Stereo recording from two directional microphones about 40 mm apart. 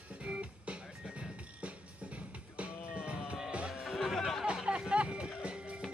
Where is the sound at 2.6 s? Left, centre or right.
Right.